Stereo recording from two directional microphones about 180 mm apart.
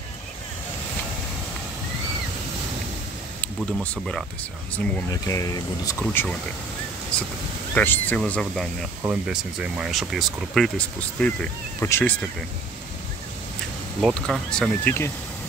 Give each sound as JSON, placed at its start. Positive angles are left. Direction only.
{"t": 3.3, "sound": "speech", "side_deg": 5}
{"t": 5.1, "sound": "speech", "side_deg": 20}
{"t": 14.0, "sound": "speech", "side_deg": 0}